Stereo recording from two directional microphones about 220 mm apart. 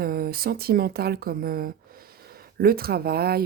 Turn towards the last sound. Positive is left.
turn(degrees=-45)  # may be behind; listen again after turning